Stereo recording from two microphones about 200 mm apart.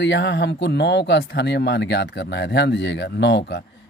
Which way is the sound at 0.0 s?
60° left (ahead or behind).